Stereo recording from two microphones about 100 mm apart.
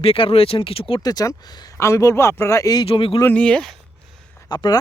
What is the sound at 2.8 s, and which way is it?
Speech, 65° left (ahead or behind).